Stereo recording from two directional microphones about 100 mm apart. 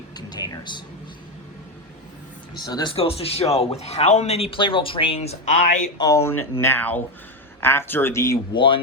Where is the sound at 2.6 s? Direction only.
45° left (ahead or behind).